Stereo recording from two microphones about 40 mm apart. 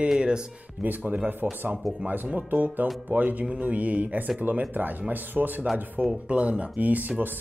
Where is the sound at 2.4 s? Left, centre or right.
Right.